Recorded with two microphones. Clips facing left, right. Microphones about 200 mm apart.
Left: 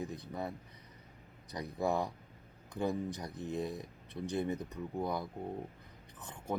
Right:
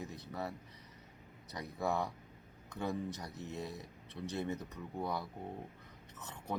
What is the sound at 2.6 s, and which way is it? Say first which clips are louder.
Speech: left 4 dB; 15° left (ahead or behind).